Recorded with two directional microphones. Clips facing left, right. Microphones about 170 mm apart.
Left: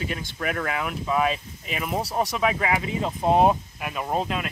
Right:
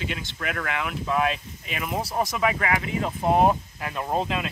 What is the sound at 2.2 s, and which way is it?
Speech, 30° left (ahead or behind).